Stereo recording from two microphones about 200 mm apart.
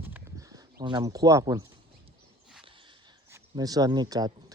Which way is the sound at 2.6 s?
25° right (ahead or behind).